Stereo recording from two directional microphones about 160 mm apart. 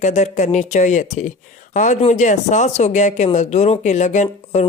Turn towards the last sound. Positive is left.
turn(degrees=45)  # may be behind; listen again after turning